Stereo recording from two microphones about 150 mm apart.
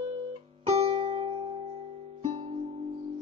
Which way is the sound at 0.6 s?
45° right (ahead or behind).